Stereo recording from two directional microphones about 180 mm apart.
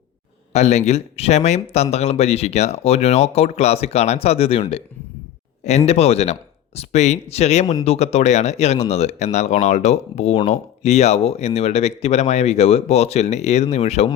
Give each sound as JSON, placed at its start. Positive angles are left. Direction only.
{"t": 0.5, "sound": "speech", "side_deg": 40}